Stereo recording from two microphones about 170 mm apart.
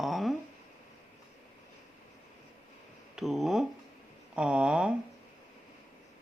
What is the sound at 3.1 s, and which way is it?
Speech, centre (ahead or behind).